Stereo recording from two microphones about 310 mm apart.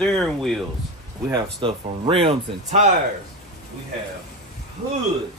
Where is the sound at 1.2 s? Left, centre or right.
Centre.